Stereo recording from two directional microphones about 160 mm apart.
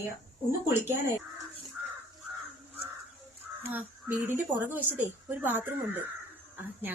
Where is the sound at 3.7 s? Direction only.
10° right (ahead or behind).